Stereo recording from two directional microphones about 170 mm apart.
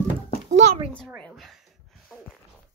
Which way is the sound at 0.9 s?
5° left (ahead or behind).